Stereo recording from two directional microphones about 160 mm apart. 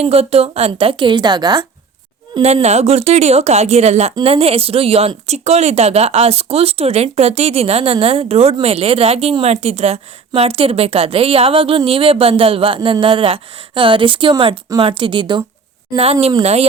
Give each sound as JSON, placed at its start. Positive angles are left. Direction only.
{"t": 0.0, "sound": "speech", "side_deg": -40}
{"t": 2.4, "sound": "a woman's voice", "side_deg": -40}
{"t": 16.4, "sound": "speech", "side_deg": -40}